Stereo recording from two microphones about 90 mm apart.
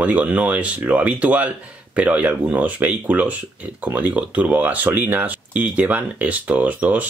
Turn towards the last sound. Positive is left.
turn(degrees=-15)  # may be behind; listen again after turning